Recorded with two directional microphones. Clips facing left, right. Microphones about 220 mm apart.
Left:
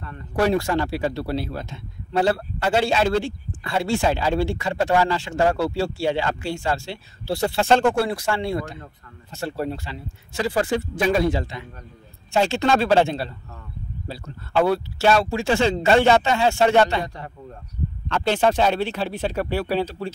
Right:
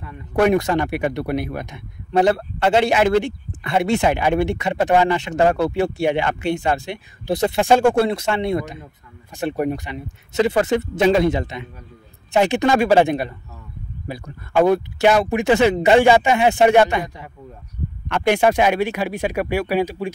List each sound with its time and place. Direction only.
0.5 s a man's voice: 20° right (ahead or behind)